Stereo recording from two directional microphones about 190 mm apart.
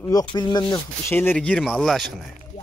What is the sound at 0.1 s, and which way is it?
Speech, 20° left (ahead or behind).